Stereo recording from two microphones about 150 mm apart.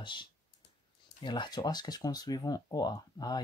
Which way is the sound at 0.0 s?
30° left (ahead or behind).